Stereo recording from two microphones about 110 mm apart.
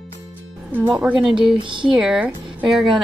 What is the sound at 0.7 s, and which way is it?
Speech, 15° right (ahead or behind).